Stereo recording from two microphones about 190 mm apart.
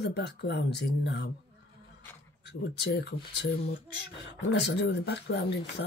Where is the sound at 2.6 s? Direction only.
65° left (ahead or behind).